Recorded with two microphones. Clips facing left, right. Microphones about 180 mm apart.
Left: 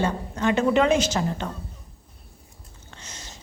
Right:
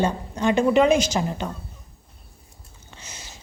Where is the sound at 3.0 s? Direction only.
10° right (ahead or behind).